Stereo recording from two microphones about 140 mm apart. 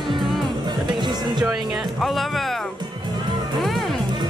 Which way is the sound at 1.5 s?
Centre (ahead or behind).